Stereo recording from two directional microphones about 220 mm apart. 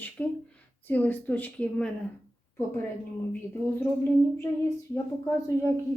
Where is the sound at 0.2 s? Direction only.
5° left (ahead or behind).